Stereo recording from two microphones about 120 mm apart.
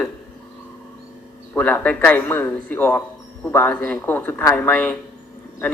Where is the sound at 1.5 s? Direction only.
15° left (ahead or behind).